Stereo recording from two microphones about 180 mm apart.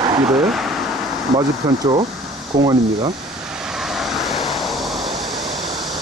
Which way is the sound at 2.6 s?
20° right (ahead or behind).